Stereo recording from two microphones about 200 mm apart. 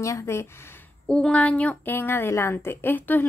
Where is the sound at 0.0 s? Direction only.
15° left (ahead or behind).